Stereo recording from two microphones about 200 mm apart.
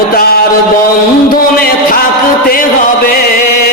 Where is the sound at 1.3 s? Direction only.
45° left (ahead or behind).